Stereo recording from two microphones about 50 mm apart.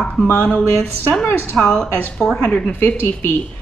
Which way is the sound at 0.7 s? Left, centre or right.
Left.